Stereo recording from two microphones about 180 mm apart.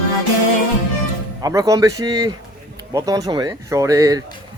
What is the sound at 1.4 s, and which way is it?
A man's voice, 20° right (ahead or behind).